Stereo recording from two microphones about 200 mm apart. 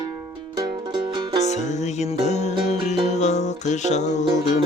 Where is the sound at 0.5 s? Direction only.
25° right (ahead or behind).